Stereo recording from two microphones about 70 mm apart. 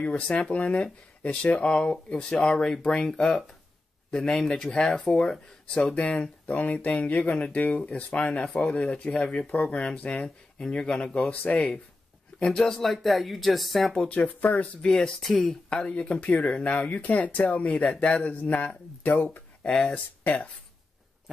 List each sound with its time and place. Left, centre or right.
0.0 s speech: centre
13.9 s speech: centre
14.9 s speech: centre
15.8 s speech: centre